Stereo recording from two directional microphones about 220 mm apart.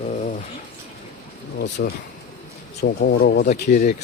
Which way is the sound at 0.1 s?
35° left (ahead or behind).